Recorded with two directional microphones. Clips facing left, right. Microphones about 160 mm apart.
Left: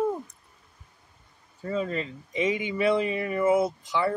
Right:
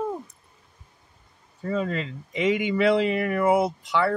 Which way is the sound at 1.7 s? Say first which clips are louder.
Right 2 dB; 70° right (ahead or behind).